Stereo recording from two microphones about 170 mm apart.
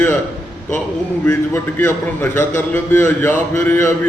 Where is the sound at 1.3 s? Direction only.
15° left (ahead or behind).